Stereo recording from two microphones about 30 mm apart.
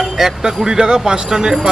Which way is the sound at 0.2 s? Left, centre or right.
Centre.